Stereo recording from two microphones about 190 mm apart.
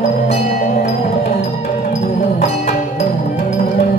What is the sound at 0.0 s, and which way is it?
Music, 40° left (ahead or behind).